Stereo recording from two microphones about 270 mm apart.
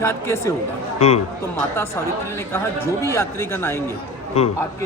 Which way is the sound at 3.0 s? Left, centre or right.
Centre.